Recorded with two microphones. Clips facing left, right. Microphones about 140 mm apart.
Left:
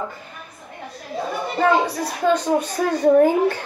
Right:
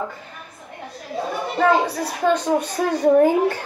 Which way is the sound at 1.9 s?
5° right (ahead or behind).